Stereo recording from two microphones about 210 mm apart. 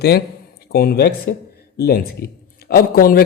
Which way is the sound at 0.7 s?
45° left (ahead or behind).